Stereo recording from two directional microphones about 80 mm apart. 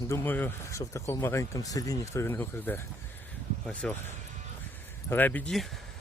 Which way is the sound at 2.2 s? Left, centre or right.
Left.